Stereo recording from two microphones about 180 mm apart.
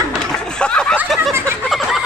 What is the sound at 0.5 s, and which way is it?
Snicker, 5° left (ahead or behind).